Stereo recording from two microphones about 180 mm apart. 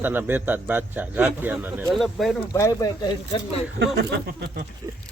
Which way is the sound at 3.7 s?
65° right (ahead or behind).